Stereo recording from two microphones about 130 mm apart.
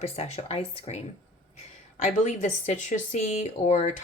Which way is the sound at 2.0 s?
70° left (ahead or behind).